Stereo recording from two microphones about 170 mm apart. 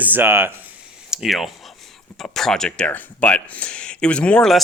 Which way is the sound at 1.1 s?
Centre (ahead or behind).